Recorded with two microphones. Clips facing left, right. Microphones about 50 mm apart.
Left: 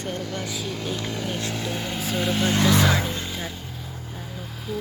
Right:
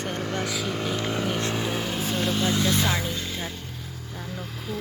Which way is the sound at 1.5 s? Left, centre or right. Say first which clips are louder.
Right 2 dB; centre.